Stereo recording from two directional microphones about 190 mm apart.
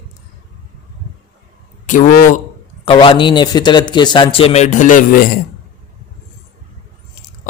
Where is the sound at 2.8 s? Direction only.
30° left (ahead or behind); by 5.3 s 45° left (ahead or behind).